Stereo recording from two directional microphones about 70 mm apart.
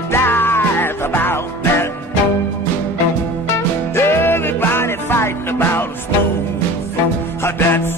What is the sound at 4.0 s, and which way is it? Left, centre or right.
Music, left.